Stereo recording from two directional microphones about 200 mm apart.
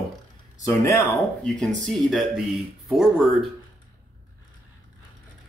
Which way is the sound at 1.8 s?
Centre (ahead or behind).